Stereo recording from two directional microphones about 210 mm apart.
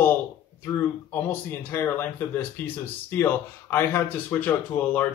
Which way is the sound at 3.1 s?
10° left (ahead or behind).